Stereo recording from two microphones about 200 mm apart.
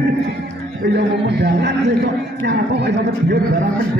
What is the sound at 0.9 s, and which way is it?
Speech, 55° right (ahead or behind).